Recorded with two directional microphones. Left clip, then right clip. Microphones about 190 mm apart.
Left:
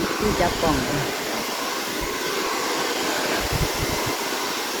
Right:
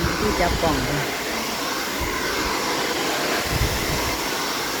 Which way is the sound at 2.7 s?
10° right (ahead or behind).